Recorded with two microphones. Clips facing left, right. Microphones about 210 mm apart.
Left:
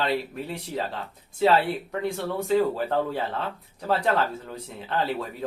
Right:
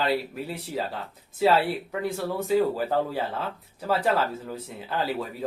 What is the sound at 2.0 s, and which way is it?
Speech, 5° right (ahead or behind).